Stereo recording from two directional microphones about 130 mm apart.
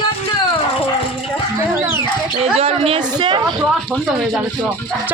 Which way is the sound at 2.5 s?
50° right (ahead or behind).